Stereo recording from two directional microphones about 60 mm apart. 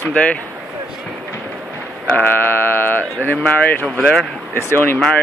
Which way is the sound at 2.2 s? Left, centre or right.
Left.